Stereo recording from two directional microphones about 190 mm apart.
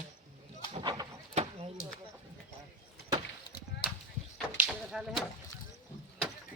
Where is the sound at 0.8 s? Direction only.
20° right (ahead or behind).